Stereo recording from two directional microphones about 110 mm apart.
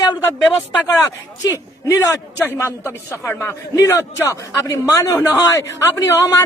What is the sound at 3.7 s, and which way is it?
A man's voice, 30° left (ahead or behind).